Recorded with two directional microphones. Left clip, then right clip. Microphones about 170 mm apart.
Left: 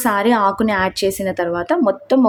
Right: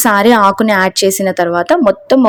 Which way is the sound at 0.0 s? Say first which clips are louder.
Right 7 dB; 35° right (ahead or behind).